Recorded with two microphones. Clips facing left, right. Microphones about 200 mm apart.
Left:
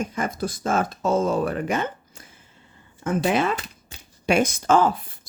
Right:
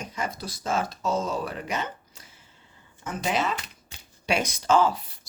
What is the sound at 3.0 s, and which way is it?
Speech, 55° left (ahead or behind).